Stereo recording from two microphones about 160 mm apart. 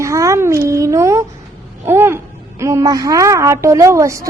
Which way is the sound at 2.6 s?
20° right (ahead or behind).